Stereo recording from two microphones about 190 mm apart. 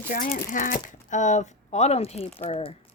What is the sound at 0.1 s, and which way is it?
Speech, 45° left (ahead or behind).